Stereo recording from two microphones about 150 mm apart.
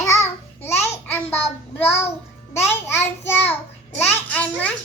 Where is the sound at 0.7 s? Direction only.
45° left (ahead or behind).